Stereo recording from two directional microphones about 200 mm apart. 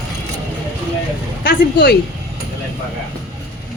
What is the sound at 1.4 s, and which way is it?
Speech, 50° left (ahead or behind).